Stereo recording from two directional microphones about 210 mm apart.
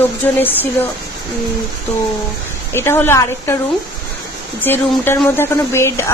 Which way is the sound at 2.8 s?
10° left (ahead or behind).